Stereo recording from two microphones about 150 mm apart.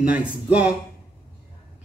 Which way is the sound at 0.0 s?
10° right (ahead or behind).